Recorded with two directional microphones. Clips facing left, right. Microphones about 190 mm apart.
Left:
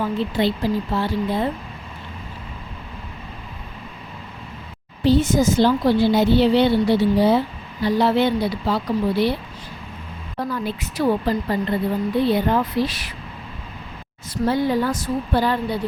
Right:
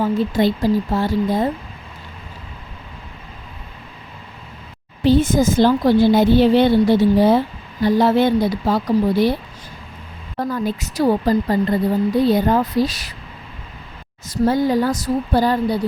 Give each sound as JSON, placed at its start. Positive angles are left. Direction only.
{"t": 0.0, "sound": "speech", "side_deg": -45}
{"t": 5.2, "sound": "a woman's voice", "side_deg": -90}
{"t": 5.5, "sound": "speech", "side_deg": -45}
{"t": 10.5, "sound": "a woman's voice", "side_deg": -40}
{"t": 14.4, "sound": "a woman's voice", "side_deg": -45}